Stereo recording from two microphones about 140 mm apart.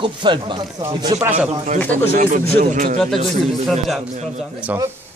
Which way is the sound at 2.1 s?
85° right.